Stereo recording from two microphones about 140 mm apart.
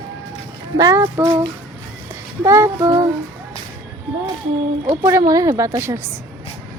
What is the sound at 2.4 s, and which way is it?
Speech, 20° right (ahead or behind).